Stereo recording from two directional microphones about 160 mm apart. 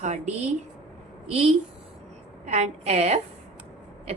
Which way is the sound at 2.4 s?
45° right (ahead or behind).